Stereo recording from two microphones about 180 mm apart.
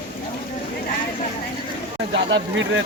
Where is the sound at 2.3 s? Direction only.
90° right.